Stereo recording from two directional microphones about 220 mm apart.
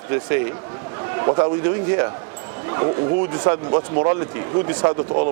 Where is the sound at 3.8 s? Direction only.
35° right (ahead or behind).